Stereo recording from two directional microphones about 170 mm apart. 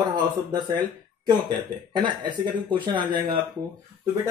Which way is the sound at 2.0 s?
25° right (ahead or behind).